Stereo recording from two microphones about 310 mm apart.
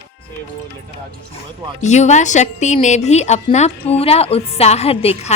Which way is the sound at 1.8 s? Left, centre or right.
Left.